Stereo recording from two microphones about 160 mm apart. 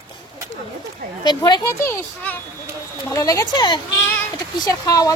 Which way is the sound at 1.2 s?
25° left (ahead or behind).